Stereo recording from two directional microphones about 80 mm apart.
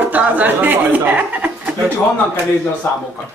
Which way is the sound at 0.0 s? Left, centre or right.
Centre.